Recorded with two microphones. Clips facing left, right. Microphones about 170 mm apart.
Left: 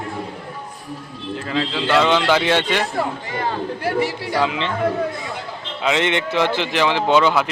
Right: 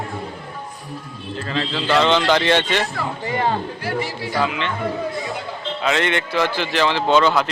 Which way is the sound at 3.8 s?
65° left (ahead or behind).